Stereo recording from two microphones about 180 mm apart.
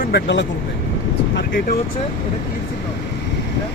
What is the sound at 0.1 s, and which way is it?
Speech, 75° left (ahead or behind).